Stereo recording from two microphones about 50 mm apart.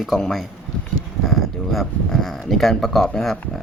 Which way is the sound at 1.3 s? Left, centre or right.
Centre.